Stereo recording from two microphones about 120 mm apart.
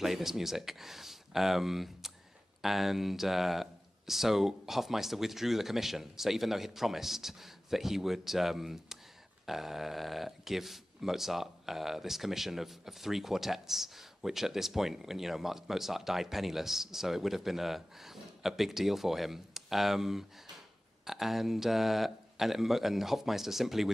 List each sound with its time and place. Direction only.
0.0 s speech: centre (ahead or behind)